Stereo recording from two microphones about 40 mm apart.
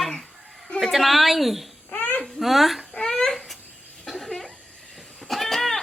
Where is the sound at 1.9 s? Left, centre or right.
Left.